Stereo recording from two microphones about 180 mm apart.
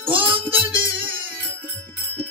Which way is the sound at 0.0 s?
30° right (ahead or behind).